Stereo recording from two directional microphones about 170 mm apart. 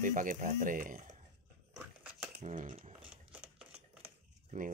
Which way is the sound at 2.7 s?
30° right (ahead or behind).